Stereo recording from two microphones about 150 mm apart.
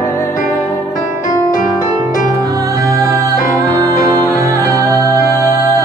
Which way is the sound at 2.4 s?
20° right (ahead or behind).